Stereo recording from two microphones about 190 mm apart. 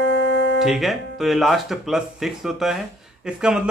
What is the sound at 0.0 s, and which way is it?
Music, 70° right (ahead or behind).